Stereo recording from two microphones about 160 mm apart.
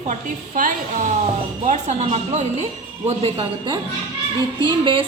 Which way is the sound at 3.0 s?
35° right (ahead or behind).